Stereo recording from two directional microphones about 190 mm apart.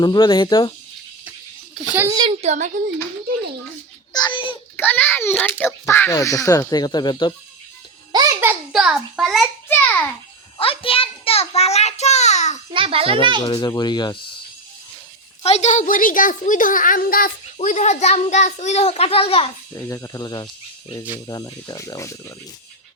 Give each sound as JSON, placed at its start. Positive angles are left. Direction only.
{"t": 0.0, "sound": "speech", "side_deg": 20}
{"t": 1.9, "sound": "a child's voice", "side_deg": -15}
{"t": 2.4, "sound": "speech", "side_deg": -35}
{"t": 4.1, "sound": "speech", "side_deg": 25}
{"t": 4.8, "sound": "a child's voice", "side_deg": 10}
{"t": 8.1, "sound": "a child's voice", "side_deg": -20}
{"t": 9.6, "sound": "a child's voice", "side_deg": 10}
{"t": 10.6, "sound": "a child's voice", "side_deg": 30}
{"t": 12.7, "sound": "a child's voice", "side_deg": -30}
{"t": 13.4, "sound": "speech", "side_deg": 25}
{"t": 15.4, "sound": "a child's voice", "side_deg": 35}
{"t": 19.7, "sound": "speech", "side_deg": 15}